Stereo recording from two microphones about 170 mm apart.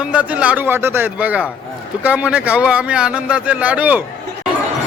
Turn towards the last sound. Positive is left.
turn(degrees=-10)  # may be behind; listen again after turning